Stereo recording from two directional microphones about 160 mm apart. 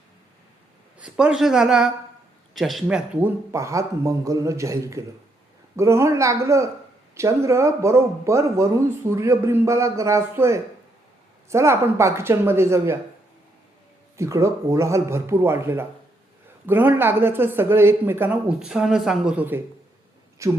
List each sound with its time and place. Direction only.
0.9 s speech: 5° right (ahead or behind)
14.2 s speech: 20° right (ahead or behind)